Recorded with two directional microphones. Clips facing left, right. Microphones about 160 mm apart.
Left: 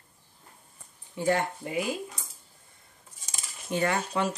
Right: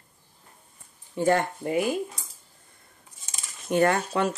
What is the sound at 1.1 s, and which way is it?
Speech, 50° right (ahead or behind).